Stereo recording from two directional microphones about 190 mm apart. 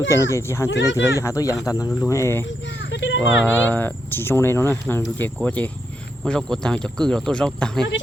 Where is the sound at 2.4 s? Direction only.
75° left (ahead or behind).